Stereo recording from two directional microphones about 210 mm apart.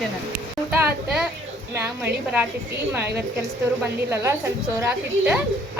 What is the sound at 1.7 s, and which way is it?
Speech, 10° right (ahead or behind).